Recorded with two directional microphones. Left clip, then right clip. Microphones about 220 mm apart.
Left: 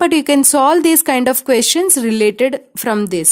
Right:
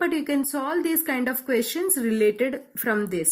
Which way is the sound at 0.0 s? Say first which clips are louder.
Left 12 dB; 50° left (ahead or behind).